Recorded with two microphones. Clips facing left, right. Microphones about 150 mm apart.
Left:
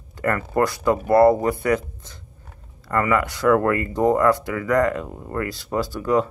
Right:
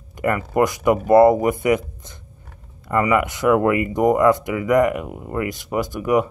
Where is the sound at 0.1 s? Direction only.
15° right (ahead or behind).